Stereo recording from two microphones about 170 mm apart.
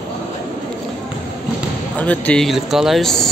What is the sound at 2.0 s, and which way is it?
A man's voice, 10° left (ahead or behind).